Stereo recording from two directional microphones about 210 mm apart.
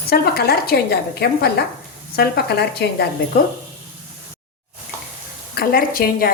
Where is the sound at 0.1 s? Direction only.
45° left (ahead or behind).